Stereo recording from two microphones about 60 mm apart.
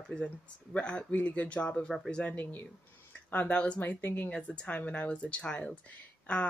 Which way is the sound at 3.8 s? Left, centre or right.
Left.